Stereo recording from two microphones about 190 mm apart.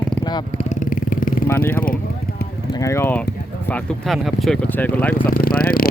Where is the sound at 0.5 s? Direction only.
40° left (ahead or behind).